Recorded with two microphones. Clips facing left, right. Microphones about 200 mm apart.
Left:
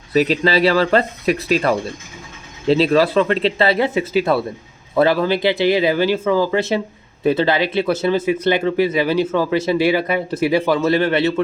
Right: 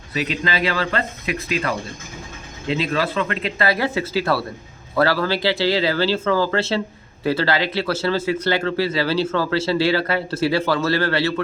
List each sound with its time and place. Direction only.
0.1 s speech: 35° left (ahead or behind); by 11.3 s 20° left (ahead or behind)